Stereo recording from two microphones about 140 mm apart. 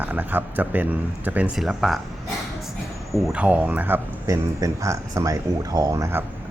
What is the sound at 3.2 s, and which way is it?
Speech, 10° right (ahead or behind).